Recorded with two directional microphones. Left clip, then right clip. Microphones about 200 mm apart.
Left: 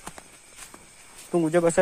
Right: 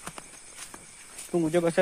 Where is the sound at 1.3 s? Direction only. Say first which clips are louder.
Left 4 dB; 25° left (ahead or behind).